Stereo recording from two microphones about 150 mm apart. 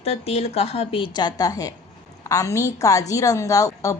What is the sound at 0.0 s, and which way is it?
A woman's voice, 45° left (ahead or behind).